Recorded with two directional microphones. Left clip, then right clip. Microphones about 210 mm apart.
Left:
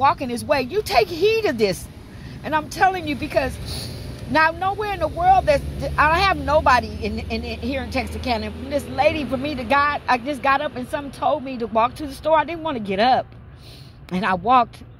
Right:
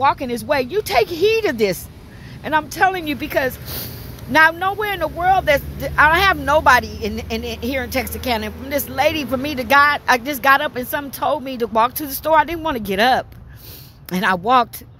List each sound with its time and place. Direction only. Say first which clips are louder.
0.0 s speech: right 1 dB; 30° right (ahead or behind)